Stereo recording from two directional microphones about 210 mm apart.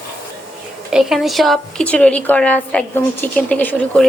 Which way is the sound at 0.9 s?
Centre (ahead or behind).